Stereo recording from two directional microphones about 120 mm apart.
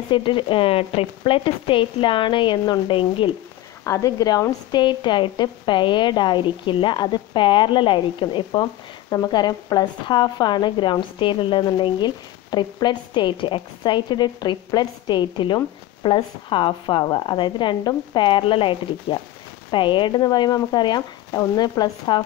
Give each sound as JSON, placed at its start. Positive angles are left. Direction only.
{"t": 0.1, "sound": "speech", "side_deg": 45}
{"t": 3.8, "sound": "speech", "side_deg": 30}